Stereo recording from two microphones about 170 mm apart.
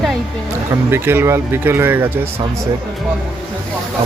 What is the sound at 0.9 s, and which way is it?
Speech, 15° right (ahead or behind).